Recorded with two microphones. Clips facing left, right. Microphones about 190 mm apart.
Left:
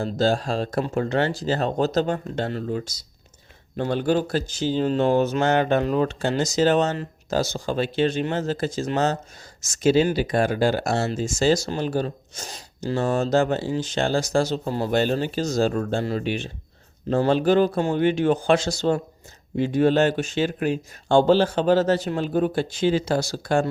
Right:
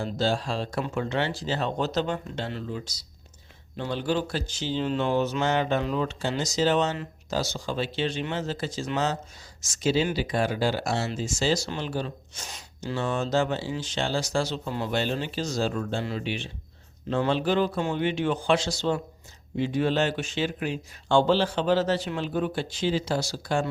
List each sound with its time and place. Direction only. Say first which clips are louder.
0.0 s speech: left 5 dB; 45° left (ahead or behind)